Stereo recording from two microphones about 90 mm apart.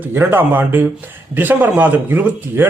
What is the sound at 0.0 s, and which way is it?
Speech, 25° right (ahead or behind).